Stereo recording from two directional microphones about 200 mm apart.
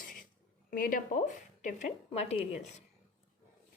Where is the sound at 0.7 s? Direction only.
45° left (ahead or behind).